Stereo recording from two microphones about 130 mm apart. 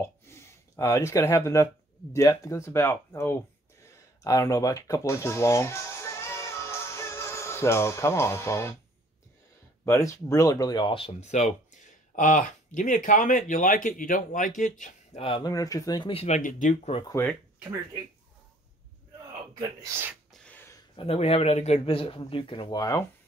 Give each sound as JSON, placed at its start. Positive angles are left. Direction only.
{"t": 0.0, "sound": "a sound", "side_deg": 20}
{"t": 2.1, "sound": "speech", "side_deg": 25}
{"t": 9.8, "sound": "speech", "side_deg": 20}
{"t": 11.1, "sound": "speech", "side_deg": 65}
{"t": 15.1, "sound": "a man's voice", "side_deg": 40}
{"t": 15.4, "sound": "speech", "side_deg": 25}
{"t": 16.1, "sound": "a man's voice", "side_deg": 45}
{"t": 16.3, "sound": "speech", "side_deg": 85}
{"t": 17.1, "sound": "speech", "side_deg": 15}
{"t": 19.6, "sound": "speech", "side_deg": -25}
{"t": 20.4, "sound": "a sound", "side_deg": 15}
{"t": 20.9, "sound": "a man's voice", "side_deg": 50}